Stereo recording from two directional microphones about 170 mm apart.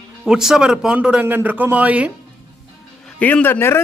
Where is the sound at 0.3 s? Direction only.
5° right (ahead or behind).